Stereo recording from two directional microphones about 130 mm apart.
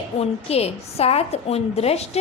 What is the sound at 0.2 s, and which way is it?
A woman's voice, 55° left (ahead or behind).